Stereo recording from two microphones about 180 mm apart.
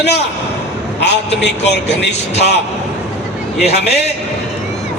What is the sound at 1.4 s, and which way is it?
Speech, 70° left (ahead or behind).